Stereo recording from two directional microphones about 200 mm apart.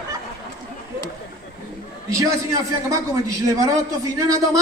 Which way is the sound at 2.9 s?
15° right (ahead or behind).